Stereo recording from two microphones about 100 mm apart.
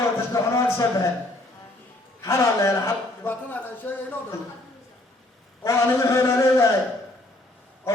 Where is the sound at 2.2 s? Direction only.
30° left (ahead or behind).